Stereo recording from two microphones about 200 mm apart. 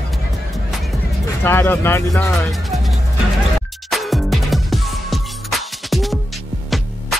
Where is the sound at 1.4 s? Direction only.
10° left (ahead or behind).